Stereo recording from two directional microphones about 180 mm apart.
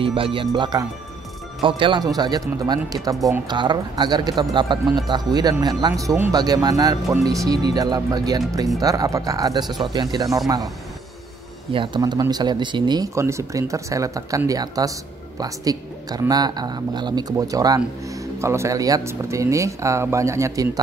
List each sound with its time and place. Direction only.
0.0 s speech: 30° right (ahead or behind)
11.7 s speech: 25° right (ahead or behind)